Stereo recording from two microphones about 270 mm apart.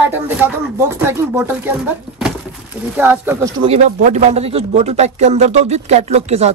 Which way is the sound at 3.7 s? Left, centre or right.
Right.